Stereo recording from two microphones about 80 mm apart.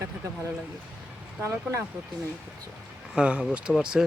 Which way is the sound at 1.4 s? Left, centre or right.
Right.